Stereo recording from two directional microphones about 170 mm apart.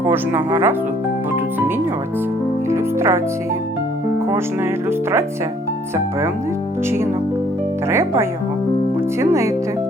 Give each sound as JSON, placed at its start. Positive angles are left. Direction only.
{"t": 0.1, "sound": "speech", "side_deg": -10}
{"t": 2.6, "sound": "music", "side_deg": -15}
{"t": 7.9, "sound": "speech", "side_deg": -15}